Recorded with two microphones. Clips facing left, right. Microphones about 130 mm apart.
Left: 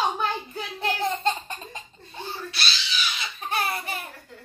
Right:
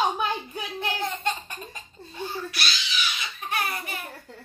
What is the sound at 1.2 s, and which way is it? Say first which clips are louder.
Speech: left 3 dB; 25° left (ahead or behind).